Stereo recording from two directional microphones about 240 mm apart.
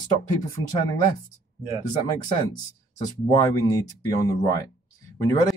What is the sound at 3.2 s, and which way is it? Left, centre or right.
Speech, centre.